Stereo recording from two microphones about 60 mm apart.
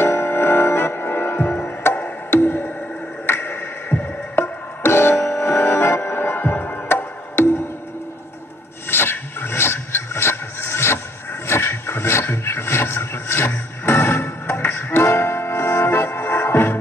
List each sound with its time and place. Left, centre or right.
0.0 s music: left
8.9 s a sound: left
14.7 s music: left